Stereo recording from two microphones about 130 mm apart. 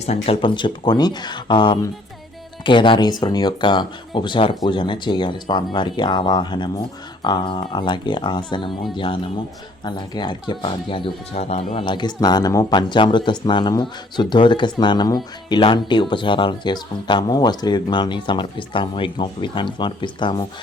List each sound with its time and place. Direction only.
0.0 s speech: 55° left (ahead or behind)
0.4 s speech: 35° left (ahead or behind); by 11.6 s 55° left (ahead or behind)
11.8 s speech: 35° left (ahead or behind)